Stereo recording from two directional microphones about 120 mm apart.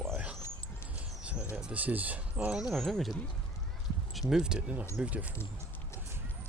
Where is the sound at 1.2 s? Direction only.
10° right (ahead or behind).